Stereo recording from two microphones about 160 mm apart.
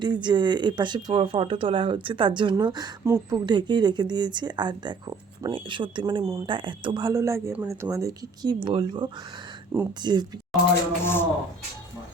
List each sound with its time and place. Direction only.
0.0 s speech: 30° right (ahead or behind)
11.0 s speech: 15° left (ahead or behind)